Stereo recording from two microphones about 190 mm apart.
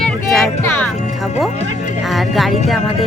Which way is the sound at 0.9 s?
45° left (ahead or behind).